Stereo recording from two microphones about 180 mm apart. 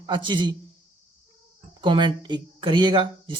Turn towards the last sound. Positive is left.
turn(degrees=-25)  # may be behind; listen again after turning